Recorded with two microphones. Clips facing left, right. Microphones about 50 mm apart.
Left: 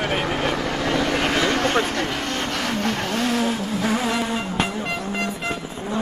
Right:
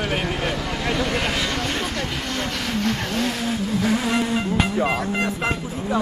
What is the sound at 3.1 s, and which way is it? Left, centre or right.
Vehicle, centre.